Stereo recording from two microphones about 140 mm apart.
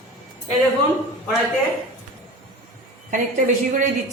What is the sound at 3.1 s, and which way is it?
Speech, 70° right (ahead or behind).